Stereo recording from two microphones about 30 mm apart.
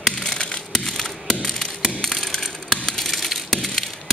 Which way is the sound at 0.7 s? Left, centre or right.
Centre.